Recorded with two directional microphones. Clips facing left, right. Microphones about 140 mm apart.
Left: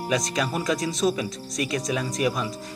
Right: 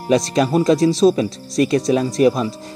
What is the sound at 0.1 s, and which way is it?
Speech, 30° right (ahead or behind).